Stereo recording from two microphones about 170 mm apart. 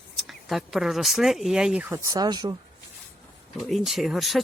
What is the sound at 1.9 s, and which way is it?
Speech, 20° right (ahead or behind).